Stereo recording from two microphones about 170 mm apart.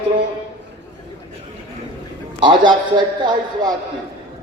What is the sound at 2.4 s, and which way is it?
Speech, 30° right (ahead or behind).